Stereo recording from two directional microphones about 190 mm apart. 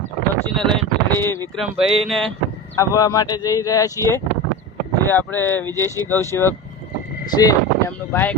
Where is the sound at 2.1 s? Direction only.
Centre (ahead or behind).